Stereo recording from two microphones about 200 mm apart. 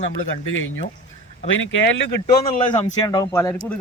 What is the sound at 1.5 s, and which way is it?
Speech, 70° left (ahead or behind).